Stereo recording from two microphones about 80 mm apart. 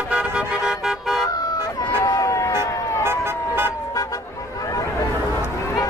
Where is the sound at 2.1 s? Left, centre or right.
Left.